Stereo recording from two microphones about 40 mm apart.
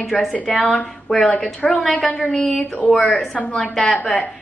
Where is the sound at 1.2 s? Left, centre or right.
Left.